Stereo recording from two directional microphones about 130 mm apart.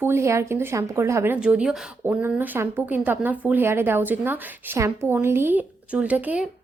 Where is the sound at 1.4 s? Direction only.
5° right (ahead or behind).